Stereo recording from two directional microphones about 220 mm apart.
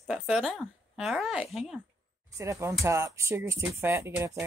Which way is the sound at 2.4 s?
10° right (ahead or behind).